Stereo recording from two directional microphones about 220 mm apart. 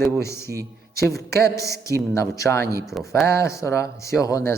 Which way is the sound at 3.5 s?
15° left (ahead or behind).